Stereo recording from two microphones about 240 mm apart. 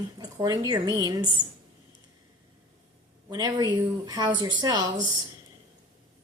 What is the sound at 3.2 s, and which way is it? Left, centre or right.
Speech, centre.